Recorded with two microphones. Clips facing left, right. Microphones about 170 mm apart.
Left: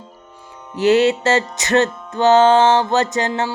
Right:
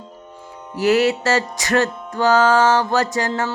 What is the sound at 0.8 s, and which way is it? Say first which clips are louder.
Music: left 2 dB; 25° left (ahead or behind).